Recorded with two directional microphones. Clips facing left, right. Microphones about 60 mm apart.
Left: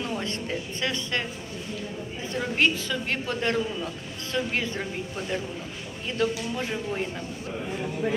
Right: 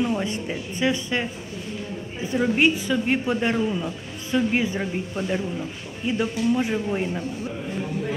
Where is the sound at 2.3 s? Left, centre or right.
Centre.